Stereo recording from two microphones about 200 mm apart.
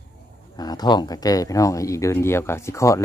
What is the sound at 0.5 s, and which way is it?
Speech, 20° left (ahead or behind).